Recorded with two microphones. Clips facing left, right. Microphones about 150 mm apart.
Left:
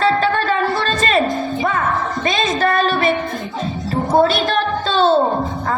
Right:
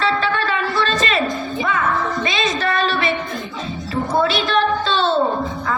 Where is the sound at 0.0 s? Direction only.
45° left (ahead or behind).